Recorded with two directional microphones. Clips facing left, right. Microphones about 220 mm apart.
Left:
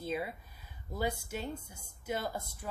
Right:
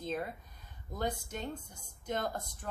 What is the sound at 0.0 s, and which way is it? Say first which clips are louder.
Speech: left 1 dB; 10° left (ahead or behind).